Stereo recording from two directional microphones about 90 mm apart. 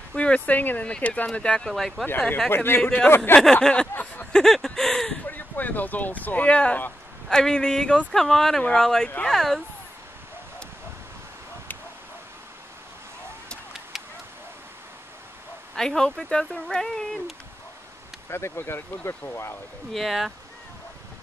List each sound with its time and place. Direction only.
0.1 s speech: 10° left (ahead or behind)
2.0 s speech: 15° left (ahead or behind)
2.5 s speech: 25° left (ahead or behind)
2.8 s speech: 15° left (ahead or behind)
3.9 s a sound: 15° left (ahead or behind)
4.4 s speech: 5° left (ahead or behind)
5.2 s speech: 20° left (ahead or behind)
13.9 s a sound: 5° right (ahead or behind)
15.7 s speech: 5° left (ahead or behind)
18.3 s speech: 25° left (ahead or behind)
19.9 s speech: centre (ahead or behind)